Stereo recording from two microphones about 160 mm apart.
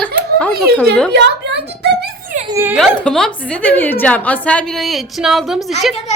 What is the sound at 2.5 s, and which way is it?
Speech, 15° right (ahead or behind).